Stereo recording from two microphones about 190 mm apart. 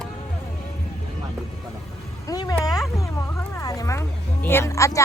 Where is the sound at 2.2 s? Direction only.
20° left (ahead or behind).